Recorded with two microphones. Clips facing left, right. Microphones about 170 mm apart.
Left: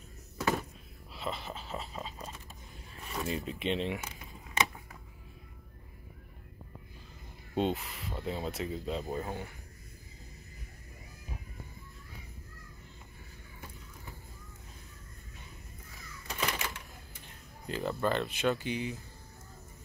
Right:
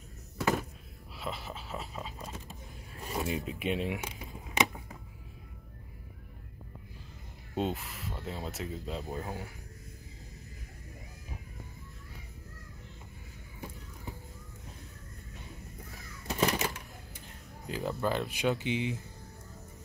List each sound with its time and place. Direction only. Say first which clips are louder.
0.4 s music: right 1 dB; centre (ahead or behind)
1.1 s a sound: left 1 dB; 5° right (ahead or behind)
3.2 s speech: right 1 dB; 15° right (ahead or behind)
7.5 s speech: left 2 dB; centre (ahead or behind)
16.3 s a sound: right 6 dB; 40° right (ahead or behind)
17.6 s speech: left 1 dB; 10° right (ahead or behind)